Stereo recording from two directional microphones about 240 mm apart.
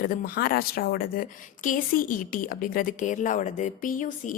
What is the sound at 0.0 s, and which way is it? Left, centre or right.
Speech, left.